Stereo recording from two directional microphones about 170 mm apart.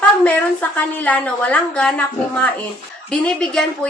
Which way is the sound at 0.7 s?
10° left (ahead or behind).